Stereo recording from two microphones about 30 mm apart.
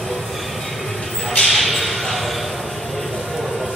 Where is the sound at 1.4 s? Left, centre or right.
Centre.